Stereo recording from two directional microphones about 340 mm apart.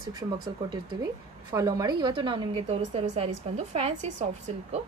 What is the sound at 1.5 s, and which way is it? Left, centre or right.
A woman's voice, centre.